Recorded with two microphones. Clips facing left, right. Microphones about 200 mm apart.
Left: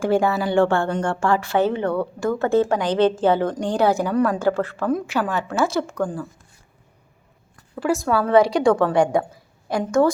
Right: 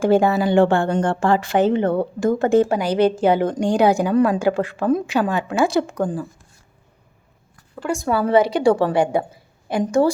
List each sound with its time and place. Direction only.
0.0 s a woman's voice: 20° right (ahead or behind)
0.9 s a woman's voice: 30° right (ahead or behind)
1.2 s a woman's voice: 20° right (ahead or behind)
7.8 s a woman's voice: 5° left (ahead or behind)
9.3 s a sound: 25° right (ahead or behind)